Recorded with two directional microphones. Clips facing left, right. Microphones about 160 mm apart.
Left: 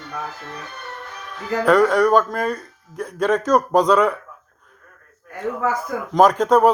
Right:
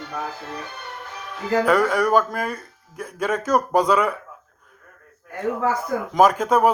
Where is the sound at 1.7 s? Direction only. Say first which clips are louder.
Left 6 dB; 5° right (ahead or behind).